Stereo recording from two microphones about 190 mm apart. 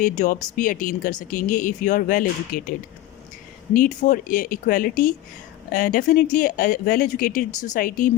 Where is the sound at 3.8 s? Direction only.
40° left (ahead or behind).